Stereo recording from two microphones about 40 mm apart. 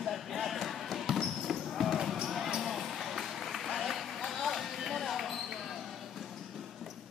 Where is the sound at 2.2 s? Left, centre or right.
Centre.